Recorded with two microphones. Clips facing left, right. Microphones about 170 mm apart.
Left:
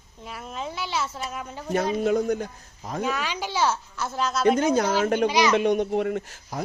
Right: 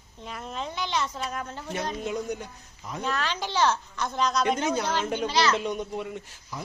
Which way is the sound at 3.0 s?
10° left (ahead or behind).